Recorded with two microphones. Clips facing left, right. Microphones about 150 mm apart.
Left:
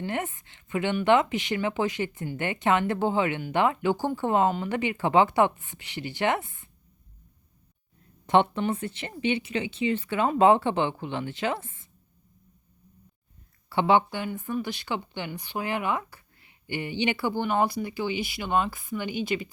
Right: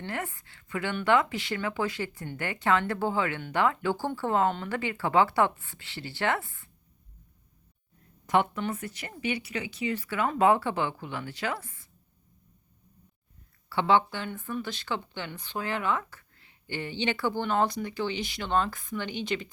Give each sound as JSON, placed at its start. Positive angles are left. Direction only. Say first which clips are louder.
{"t": 0.0, "sound": "speech", "louder": "left 4 dB", "side_deg": 20}
{"t": 8.3, "sound": "speech", "louder": "left 4 dB", "side_deg": 25}
{"t": 13.7, "sound": "speech", "louder": "left 2 dB", "side_deg": 15}